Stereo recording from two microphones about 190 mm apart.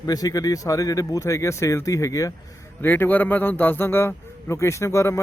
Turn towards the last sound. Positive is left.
turn(degrees=15)  # may be behind; listen again after turning